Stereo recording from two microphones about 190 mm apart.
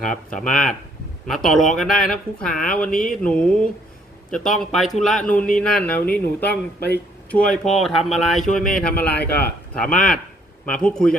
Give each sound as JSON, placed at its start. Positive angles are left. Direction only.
{"t": 0.3, "sound": "speech", "side_deg": 5}
{"t": 6.7, "sound": "speech", "side_deg": 60}
{"t": 7.3, "sound": "speech", "side_deg": 5}
{"t": 9.2, "sound": "speech", "side_deg": 55}
{"t": 9.7, "sound": "speech", "side_deg": 5}